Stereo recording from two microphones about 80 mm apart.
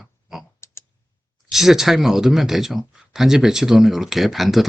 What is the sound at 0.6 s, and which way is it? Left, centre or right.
Typing, left.